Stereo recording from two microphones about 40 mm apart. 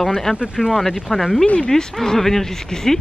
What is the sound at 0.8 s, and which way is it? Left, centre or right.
Speech, centre.